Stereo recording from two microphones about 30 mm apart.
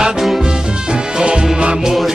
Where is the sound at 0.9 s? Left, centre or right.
Right.